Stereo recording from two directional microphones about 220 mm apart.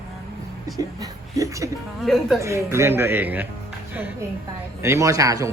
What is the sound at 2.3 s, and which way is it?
Speech, 15° right (ahead or behind).